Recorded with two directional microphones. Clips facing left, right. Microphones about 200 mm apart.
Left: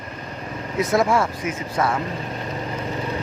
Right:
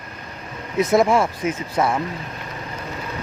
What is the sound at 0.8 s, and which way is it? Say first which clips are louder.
Speech: right 3 dB; 20° right (ahead or behind).